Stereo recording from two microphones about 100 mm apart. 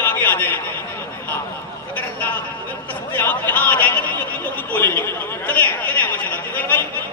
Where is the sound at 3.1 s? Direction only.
20° left (ahead or behind).